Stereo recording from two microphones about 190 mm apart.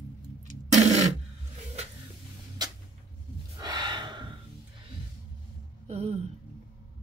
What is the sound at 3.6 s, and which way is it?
Gasp, 25° right (ahead or behind).